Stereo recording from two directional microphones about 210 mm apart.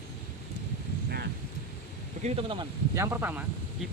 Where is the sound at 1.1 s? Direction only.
50° right (ahead or behind).